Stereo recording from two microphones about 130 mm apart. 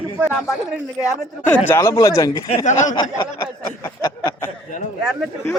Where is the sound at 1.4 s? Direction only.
20° left (ahead or behind).